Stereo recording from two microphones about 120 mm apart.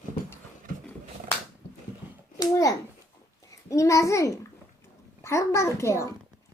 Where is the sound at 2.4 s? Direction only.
30° left (ahead or behind).